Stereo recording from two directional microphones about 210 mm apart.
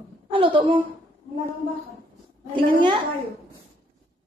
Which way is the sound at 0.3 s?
25° right (ahead or behind).